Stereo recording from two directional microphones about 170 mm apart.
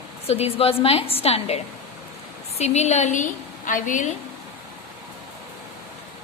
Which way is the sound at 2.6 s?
40° left (ahead or behind).